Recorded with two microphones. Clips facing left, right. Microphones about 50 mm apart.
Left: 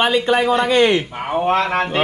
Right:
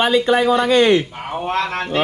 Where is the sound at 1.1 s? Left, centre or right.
Centre.